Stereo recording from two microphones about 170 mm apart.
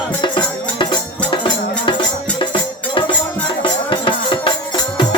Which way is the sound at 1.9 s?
30° left (ahead or behind).